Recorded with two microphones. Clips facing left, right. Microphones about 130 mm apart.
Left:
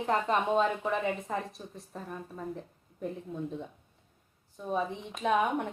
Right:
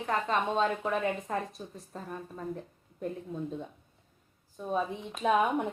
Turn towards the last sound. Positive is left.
turn(degrees=-5)  # may be behind; listen again after turning